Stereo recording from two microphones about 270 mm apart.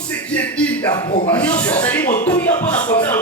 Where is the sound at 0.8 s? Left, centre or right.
Centre.